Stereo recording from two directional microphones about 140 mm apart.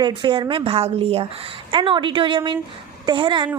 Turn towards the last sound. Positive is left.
turn(degrees=-35)  # may be behind; listen again after turning